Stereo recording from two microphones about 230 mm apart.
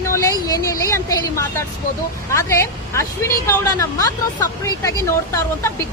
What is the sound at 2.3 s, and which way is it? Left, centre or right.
A woman's voice, centre.